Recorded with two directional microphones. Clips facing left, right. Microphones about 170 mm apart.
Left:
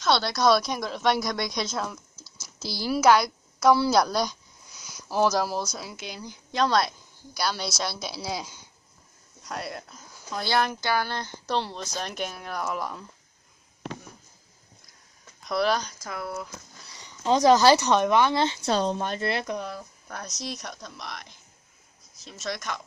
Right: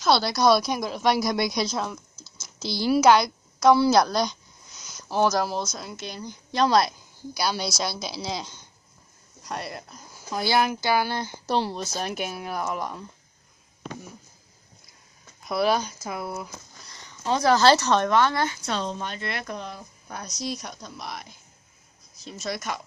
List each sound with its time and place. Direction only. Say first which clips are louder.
0.0 s a woman's voice: right 2 dB; centre (ahead or behind)
15.4 s speech: right 2 dB; 5° right (ahead or behind)
16.8 s speech: left 3 dB; 10° left (ahead or behind)
18.7 s a woman's voice: left 4 dB; 45° left (ahead or behind)
19.6 s speech: left 2 dB; centre (ahead or behind)